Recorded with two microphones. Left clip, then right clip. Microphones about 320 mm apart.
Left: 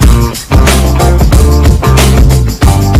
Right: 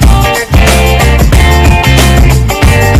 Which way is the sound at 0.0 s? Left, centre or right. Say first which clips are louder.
Right 5 dB; centre.